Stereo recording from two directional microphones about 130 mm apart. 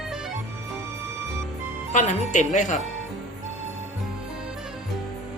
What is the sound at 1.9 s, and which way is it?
Speech, 70° left (ahead or behind).